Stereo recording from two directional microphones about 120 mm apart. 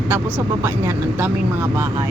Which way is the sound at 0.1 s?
15° right (ahead or behind).